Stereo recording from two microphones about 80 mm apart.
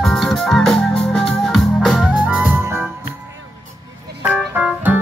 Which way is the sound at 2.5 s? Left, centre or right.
Right.